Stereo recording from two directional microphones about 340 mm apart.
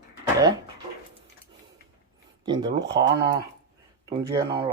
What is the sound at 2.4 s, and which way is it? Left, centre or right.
Speech, centre.